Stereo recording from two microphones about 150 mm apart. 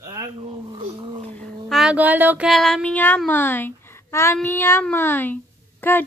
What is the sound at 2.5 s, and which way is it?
A child's voice, 5° left (ahead or behind).